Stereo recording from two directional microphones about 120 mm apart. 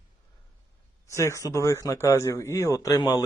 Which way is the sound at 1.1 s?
25° left (ahead or behind).